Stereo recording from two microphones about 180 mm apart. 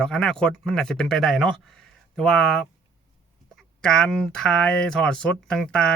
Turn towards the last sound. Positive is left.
turn(degrees=5)  # may be behind; listen again after turning